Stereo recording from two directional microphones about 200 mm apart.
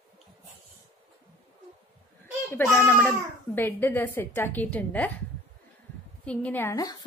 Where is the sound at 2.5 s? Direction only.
10° left (ahead or behind).